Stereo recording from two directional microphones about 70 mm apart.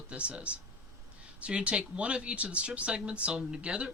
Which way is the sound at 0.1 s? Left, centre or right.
Centre.